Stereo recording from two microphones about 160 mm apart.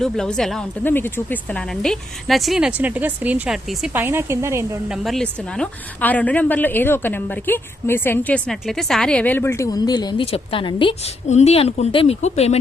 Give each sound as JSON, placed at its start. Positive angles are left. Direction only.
{"t": 0.0, "sound": "speech", "side_deg": 5}
{"t": 4.9, "sound": "a woman's voice", "side_deg": 0}
{"t": 11.3, "sound": "speech", "side_deg": 45}